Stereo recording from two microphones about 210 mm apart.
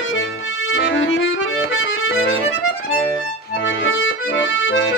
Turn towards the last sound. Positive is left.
turn(degrees=65)  # may be behind; listen again after turning